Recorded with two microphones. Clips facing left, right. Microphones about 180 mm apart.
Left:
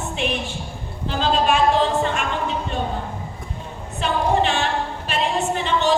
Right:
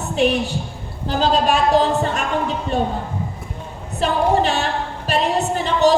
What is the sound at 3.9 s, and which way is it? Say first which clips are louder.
Speech: right 3 dB; 35° right (ahead or behind).